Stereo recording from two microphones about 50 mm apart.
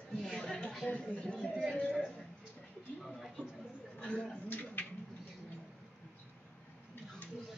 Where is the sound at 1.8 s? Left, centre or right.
Left.